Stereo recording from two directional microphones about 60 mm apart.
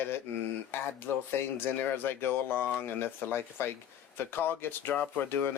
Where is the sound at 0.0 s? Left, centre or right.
Left.